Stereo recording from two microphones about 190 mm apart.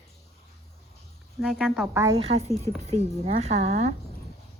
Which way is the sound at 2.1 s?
30° right (ahead or behind).